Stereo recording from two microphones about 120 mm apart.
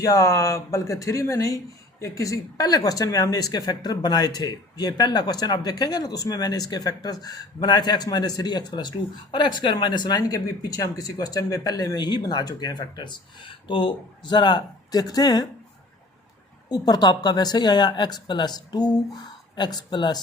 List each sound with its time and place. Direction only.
0.0 s speech: 30° left (ahead or behind)
16.6 s speech: 35° left (ahead or behind)